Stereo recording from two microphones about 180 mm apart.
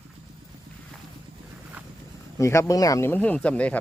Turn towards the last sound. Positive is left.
turn(degrees=5)  # may be behind; listen again after turning